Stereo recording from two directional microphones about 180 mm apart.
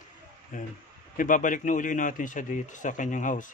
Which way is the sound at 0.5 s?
45° left (ahead or behind).